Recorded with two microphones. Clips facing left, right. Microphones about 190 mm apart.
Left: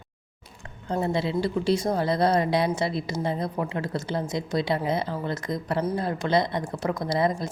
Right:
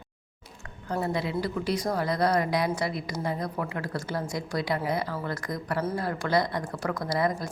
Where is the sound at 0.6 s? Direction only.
25° left (ahead or behind).